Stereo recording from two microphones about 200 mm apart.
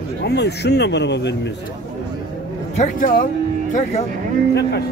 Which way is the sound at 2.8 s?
45° left (ahead or behind).